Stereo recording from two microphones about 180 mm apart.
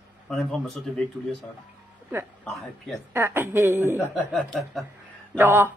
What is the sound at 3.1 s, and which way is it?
Speech, 10° right (ahead or behind).